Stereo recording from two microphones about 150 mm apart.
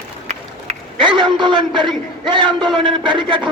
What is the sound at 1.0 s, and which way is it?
Speech, 30° right (ahead or behind).